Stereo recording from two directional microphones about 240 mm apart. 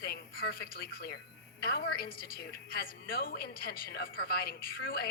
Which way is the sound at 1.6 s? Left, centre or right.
Left.